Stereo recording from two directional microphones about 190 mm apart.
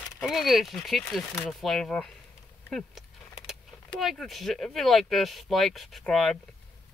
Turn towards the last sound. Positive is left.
turn(degrees=0)  # may be behind; listen again after turning